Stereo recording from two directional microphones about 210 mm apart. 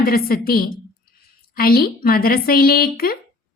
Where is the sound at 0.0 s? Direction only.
45° left (ahead or behind).